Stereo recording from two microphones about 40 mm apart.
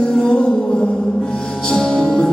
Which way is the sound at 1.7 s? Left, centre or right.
Left.